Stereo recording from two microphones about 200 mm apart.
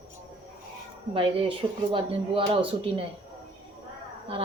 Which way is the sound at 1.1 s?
25° right (ahead or behind).